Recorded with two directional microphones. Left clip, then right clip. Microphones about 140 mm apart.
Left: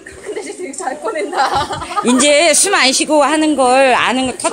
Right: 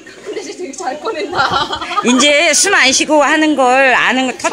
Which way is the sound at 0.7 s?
45° right (ahead or behind).